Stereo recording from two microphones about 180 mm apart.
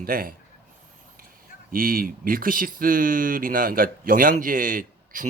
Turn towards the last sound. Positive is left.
turn(degrees=-50)  # may be behind; listen again after turning